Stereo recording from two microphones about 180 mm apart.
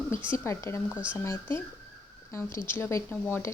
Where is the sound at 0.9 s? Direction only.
5° right (ahead or behind).